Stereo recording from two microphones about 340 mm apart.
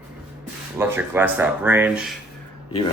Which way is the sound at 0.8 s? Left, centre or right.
Centre.